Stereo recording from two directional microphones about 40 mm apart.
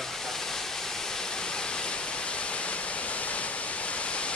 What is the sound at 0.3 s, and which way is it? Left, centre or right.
Waterfall, centre.